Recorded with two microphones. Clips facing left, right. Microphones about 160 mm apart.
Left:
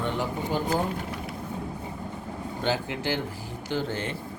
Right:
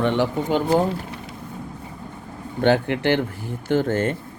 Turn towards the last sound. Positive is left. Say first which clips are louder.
# right 9 dB
turn(degrees=-50)  # may be behind; listen again after turning